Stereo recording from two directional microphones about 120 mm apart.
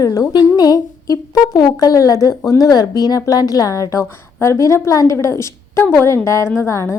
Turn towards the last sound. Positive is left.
turn(degrees=25)  # may be behind; listen again after turning